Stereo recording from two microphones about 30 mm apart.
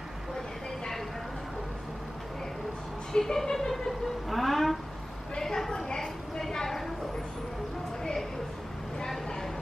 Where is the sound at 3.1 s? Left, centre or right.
Centre.